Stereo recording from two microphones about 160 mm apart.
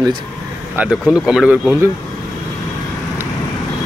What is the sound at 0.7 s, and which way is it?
Speech, 10° right (ahead or behind).